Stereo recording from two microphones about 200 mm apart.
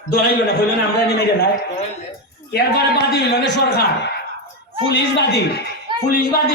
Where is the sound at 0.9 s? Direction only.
50° left (ahead or behind).